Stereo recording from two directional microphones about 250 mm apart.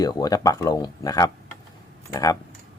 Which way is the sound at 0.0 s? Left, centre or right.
Centre.